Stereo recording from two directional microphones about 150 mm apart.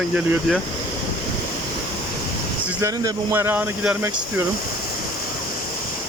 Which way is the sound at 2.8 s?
20° right (ahead or behind).